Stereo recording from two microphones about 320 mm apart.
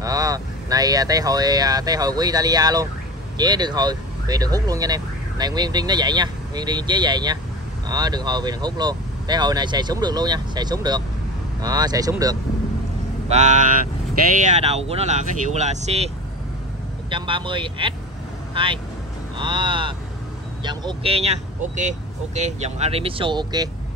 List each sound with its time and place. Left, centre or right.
0.0 s speech: centre
13.3 s speech: right
17.1 s speech: centre